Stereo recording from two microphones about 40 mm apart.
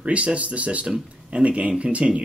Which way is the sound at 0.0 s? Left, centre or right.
Right.